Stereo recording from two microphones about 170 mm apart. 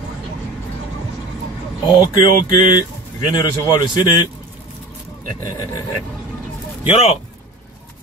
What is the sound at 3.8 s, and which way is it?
Speech, 25° left (ahead or behind).